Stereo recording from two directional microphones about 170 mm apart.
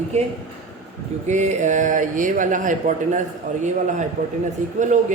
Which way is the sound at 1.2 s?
45° right (ahead or behind).